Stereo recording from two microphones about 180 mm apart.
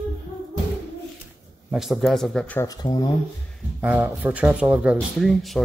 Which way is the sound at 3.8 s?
10° right (ahead or behind).